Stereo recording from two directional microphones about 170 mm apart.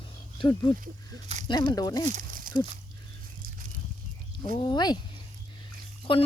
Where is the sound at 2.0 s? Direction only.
50° right (ahead or behind).